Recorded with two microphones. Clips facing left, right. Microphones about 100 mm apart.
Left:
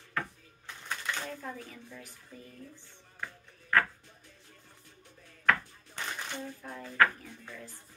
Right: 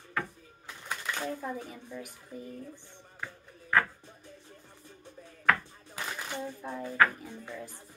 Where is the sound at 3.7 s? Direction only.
15° right (ahead or behind).